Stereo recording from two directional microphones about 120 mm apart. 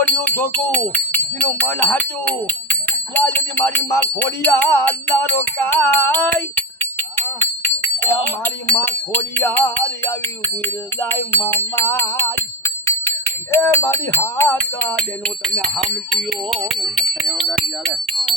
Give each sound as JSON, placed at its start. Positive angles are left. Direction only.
{"t": 0.0, "sound": "music", "side_deg": 15}
{"t": 8.7, "sound": "music", "side_deg": 15}
{"t": 11.0, "sound": "music", "side_deg": 20}
{"t": 12.8, "sound": "speech", "side_deg": 20}
{"t": 17.0, "sound": "speech", "side_deg": 0}